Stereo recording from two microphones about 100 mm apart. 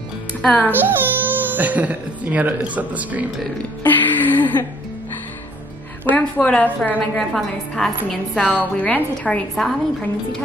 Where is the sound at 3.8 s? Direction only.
20° left (ahead or behind).